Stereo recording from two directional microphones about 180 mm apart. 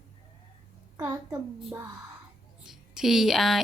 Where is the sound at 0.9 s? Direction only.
15° right (ahead or behind).